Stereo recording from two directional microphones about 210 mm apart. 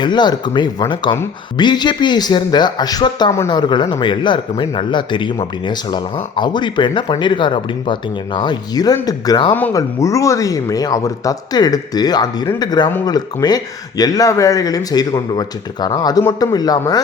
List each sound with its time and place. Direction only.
0.0 s speech: 20° left (ahead or behind)